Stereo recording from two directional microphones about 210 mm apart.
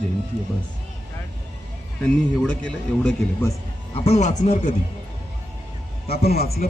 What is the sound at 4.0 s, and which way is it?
Speech, 30° left (ahead or behind).